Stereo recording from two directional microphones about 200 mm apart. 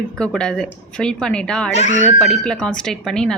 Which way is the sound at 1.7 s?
35° left (ahead or behind).